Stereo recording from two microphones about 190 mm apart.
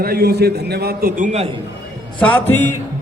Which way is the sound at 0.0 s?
55° right (ahead or behind).